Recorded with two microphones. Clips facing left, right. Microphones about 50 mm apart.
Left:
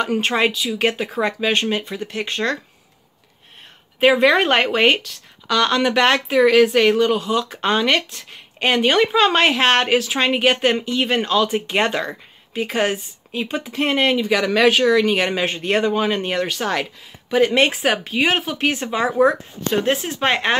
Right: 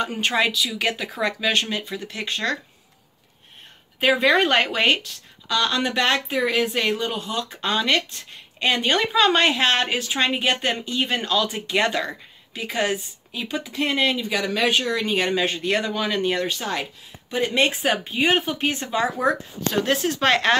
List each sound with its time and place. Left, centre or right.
0.2 s speech: left
4.0 s speech: left
5.5 s speech: left
14.3 s speech: left
15.0 s speech: left
18.7 s speech: left; by 20.5 s centre